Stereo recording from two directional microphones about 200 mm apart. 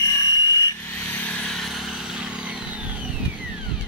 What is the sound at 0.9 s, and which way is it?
Chainsaw, 5° left (ahead or behind).